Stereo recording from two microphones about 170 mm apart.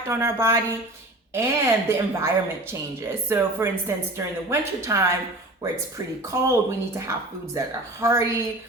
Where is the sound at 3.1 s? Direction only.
15° right (ahead or behind).